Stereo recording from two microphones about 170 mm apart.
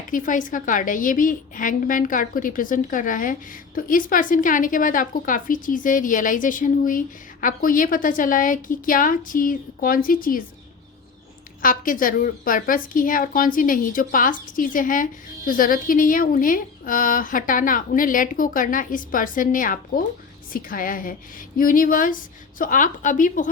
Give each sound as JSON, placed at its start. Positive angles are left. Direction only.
{"t": 0.1, "sound": "a woman's voice", "side_deg": 50}
{"t": 11.6, "sound": "a woman's voice", "side_deg": 55}